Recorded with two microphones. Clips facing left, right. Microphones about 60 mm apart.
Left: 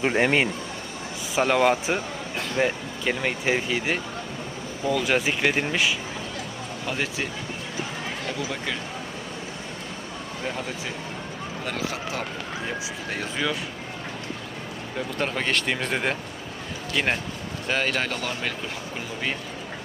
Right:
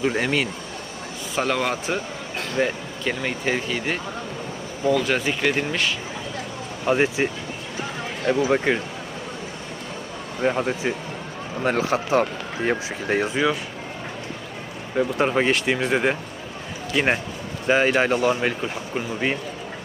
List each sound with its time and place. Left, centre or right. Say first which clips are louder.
0.1 s speech: left 2 dB; left
1.4 s speech: left 3 dB; centre
6.8 s speech: right 9 dB; right
8.3 s speech: right 13 dB; right
10.4 s speech: right 10 dB; right
13.2 s speech: right 3 dB; centre
14.9 s speech: right 8 dB; centre